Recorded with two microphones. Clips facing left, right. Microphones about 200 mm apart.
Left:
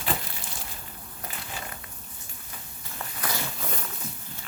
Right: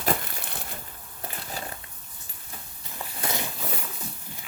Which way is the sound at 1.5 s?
35° right (ahead or behind).